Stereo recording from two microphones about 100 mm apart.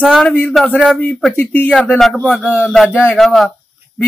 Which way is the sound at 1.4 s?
20° left (ahead or behind).